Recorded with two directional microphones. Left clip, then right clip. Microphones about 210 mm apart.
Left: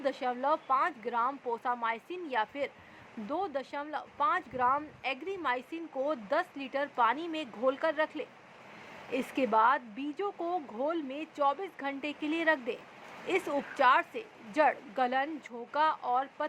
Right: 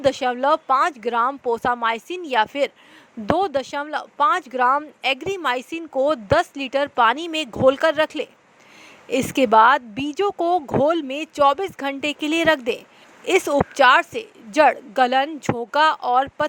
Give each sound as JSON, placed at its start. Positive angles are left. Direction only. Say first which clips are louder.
{"t": 0.0, "sound": "speech", "louder": "right 12 dB", "side_deg": -45}